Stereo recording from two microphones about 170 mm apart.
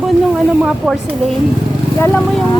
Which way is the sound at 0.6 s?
Centre (ahead or behind).